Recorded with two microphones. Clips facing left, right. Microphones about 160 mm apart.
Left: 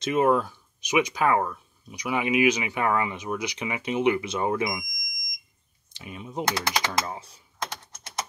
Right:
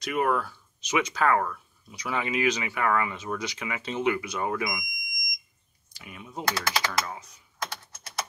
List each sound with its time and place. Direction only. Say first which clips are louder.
0.0 s speech: left 4 dB; 25° left (ahead or behind)
5.9 s speech: left 5 dB; 25° left (ahead or behind)